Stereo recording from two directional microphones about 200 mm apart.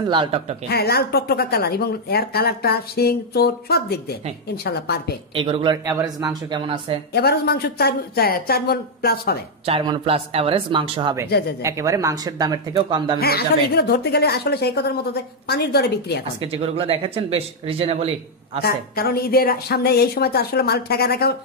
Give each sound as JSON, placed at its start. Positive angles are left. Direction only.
{"t": 0.1, "sound": "speech", "side_deg": -25}
{"t": 0.7, "sound": "speech", "side_deg": 50}
{"t": 5.3, "sound": "speech", "side_deg": -25}
{"t": 7.2, "sound": "speech", "side_deg": 50}
{"t": 9.7, "sound": "speech", "side_deg": -25}
{"t": 13.2, "sound": "speech", "side_deg": 50}
{"t": 16.3, "sound": "speech", "side_deg": -30}
{"t": 18.6, "sound": "speech", "side_deg": 50}